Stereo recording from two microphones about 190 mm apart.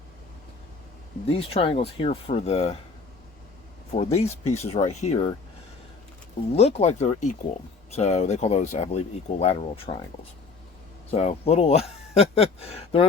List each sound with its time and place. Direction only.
1.4 s speech: 30° left (ahead or behind)
3.9 s speech: 35° left (ahead or behind)
6.6 s speech: 35° left (ahead or behind)
11.1 s speech: 35° left (ahead or behind)